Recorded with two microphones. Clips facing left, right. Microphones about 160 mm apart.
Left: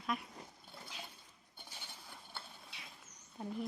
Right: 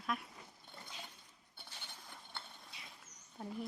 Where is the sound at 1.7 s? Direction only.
10° left (ahead or behind).